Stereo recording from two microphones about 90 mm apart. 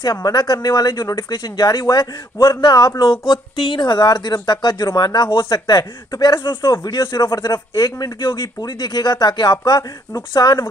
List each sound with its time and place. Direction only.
0.1 s speech: 50° left (ahead or behind)
3.1 s speech: 65° left (ahead or behind)
5.8 s speech: 45° left (ahead or behind)
6.4 s speech: 60° left (ahead or behind)
6.7 s speech: 45° left (ahead or behind)